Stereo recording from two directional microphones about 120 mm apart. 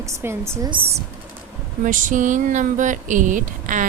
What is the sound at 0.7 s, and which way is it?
Speech, 50° right (ahead or behind).